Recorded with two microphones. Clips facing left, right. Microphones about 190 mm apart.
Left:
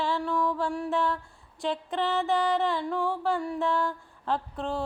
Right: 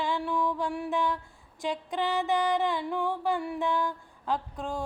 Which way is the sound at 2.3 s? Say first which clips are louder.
Left 1 dB; 15° right (ahead or behind).